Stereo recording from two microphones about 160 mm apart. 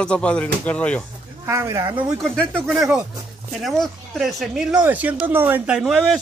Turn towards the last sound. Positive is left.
turn(degrees=-5)  # may be behind; listen again after turning